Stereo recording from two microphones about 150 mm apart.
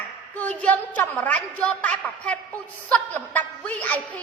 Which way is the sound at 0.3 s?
10° left (ahead or behind).